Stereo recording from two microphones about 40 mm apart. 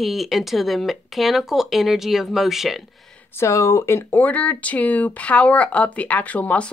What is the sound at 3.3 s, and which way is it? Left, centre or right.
Speech, left.